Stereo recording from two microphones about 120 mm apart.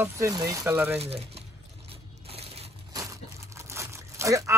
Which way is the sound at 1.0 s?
55° right (ahead or behind).